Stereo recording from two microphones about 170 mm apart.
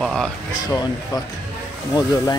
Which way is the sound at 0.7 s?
20° left (ahead or behind).